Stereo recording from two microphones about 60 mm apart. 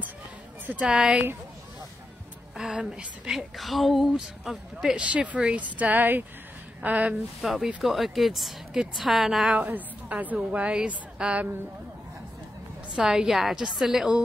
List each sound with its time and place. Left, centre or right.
0.8 s a woman's voice: centre
2.5 s a woman's voice: centre
3.3 s a woman's voice: centre
5.0 s a woman's voice: right
7.4 s speech: centre
9.5 s a woman's voice: right
12.9 s a woman's voice: centre